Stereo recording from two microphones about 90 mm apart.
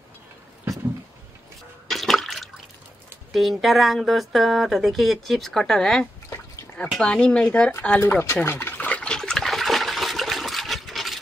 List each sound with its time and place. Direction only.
1.9 s water: centre (ahead or behind)
3.3 s speech: centre (ahead or behind)
8.0 s speech: 30° left (ahead or behind)
8.5 s water: 25° left (ahead or behind); by 11.1 s centre (ahead or behind)